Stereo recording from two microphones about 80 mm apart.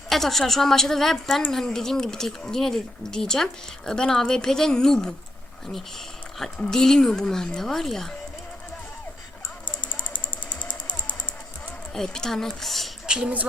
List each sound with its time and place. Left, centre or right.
0.1 s a woman's voice: centre
6.6 s speech: centre
9.9 s mechanisms: centre
11.9 s a woman's voice: centre
13.1 s a woman's voice: centre